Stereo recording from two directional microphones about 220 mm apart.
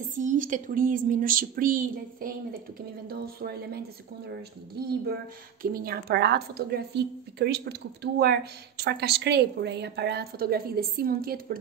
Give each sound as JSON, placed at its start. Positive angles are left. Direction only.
{"t": 0.1, "sound": "a woman's voice", "side_deg": -35}
{"t": 5.6, "sound": "a woman's voice", "side_deg": -40}